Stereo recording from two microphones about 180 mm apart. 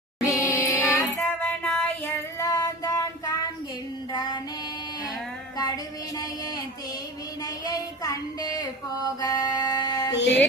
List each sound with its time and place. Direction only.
0.3 s music: 15° left (ahead or behind)
4.1 s child singing: 25° left (ahead or behind)
5.5 s a sound: 20° left (ahead or behind)
9.2 s music: 20° left (ahead or behind)
10.2 s music: 80° left